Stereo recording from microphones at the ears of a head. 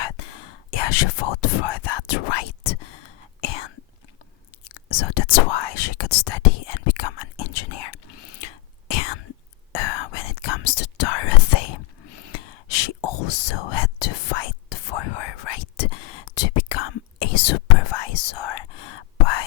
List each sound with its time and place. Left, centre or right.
0.0 s whispering: left